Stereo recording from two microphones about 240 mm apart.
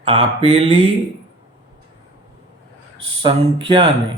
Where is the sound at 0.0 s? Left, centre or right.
Right.